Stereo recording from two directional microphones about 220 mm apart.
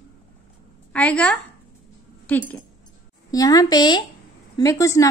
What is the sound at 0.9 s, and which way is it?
A woman's voice, 5° left (ahead or behind).